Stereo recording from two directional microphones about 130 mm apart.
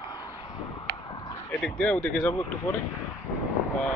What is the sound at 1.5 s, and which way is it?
Speech, 10° left (ahead or behind).